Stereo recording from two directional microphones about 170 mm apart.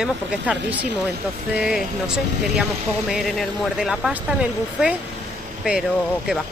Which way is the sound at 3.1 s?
Centre (ahead or behind).